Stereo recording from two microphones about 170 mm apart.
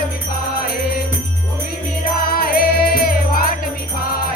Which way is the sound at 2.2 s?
60° left (ahead or behind).